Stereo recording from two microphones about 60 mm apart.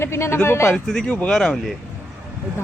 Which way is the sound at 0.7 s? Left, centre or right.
Centre.